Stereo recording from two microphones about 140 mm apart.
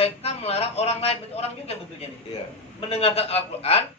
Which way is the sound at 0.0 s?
45° left (ahead or behind).